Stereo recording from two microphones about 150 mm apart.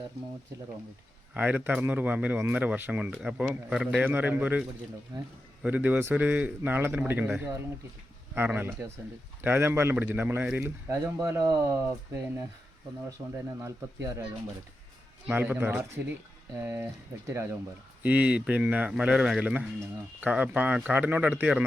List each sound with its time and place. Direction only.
1.3 s speech: 10° right (ahead or behind)
5.1 s speech: 30° right (ahead or behind)
5.6 s speech: 10° right (ahead or behind)
10.8 s speech: 25° right (ahead or behind)
13.6 s speech: 20° right (ahead or behind)
15.3 s speech: 10° right (ahead or behind)
18.0 s speech: 10° right (ahead or behind)